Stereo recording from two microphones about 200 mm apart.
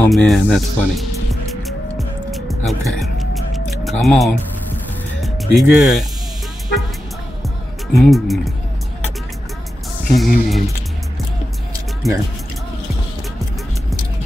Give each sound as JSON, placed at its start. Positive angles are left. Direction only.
{"t": 0.0, "sound": "speech", "side_deg": 5}
{"t": 1.5, "sound": "music", "side_deg": 0}
{"t": 5.2, "sound": "speech", "side_deg": 0}
{"t": 7.9, "sound": "speech", "side_deg": 0}
{"t": 10.1, "sound": "speech", "side_deg": 0}
{"t": 12.0, "sound": "speech", "side_deg": 0}